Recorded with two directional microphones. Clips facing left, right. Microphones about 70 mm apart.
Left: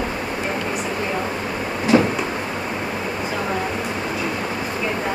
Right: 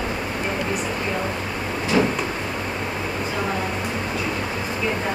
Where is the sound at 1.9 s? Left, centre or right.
Left.